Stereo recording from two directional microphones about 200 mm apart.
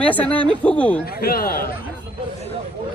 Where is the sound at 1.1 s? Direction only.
50° left (ahead or behind).